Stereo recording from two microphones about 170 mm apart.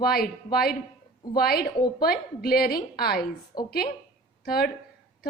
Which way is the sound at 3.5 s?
25° left (ahead or behind).